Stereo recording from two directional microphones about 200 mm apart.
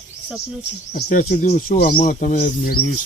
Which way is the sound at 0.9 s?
45° left (ahead or behind).